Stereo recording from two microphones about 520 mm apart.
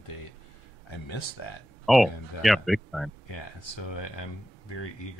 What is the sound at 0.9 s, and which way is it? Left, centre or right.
Speech, left.